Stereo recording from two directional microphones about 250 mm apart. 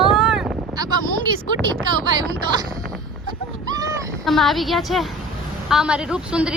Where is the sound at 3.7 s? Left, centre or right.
Centre.